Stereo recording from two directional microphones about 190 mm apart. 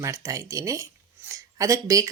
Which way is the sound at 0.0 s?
15° right (ahead or behind).